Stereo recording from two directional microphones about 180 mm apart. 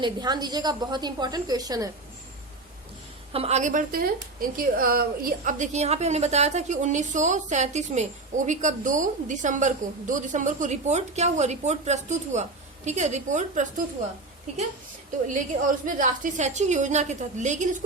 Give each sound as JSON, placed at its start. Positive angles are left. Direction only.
{"t": 0.0, "sound": "a woman's voice", "side_deg": -25}
{"t": 3.3, "sound": "a woman's voice", "side_deg": -35}
{"t": 15.3, "sound": "a woman's voice", "side_deg": -45}